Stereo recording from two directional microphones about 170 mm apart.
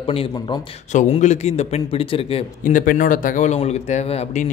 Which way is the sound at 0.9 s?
45° left (ahead or behind).